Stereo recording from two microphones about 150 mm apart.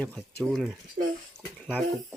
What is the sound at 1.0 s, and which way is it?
Speech, 75° right (ahead or behind).